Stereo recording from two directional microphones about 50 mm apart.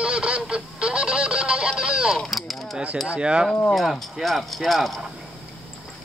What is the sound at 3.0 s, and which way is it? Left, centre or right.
Speech, right.